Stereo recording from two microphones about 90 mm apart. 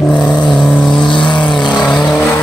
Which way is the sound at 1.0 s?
60° left (ahead or behind).